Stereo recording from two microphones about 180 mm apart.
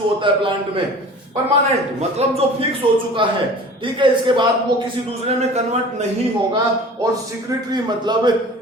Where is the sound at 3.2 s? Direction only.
25° right (ahead or behind).